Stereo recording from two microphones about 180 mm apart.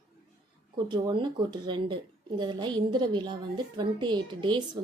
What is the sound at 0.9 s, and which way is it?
A woman's voice, 25° right (ahead or behind).